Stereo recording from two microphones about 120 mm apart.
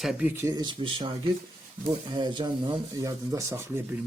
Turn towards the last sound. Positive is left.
turn(degrees=-20)  # may be behind; listen again after turning